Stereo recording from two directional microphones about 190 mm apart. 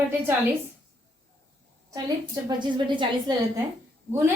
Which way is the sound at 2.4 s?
25° right (ahead or behind).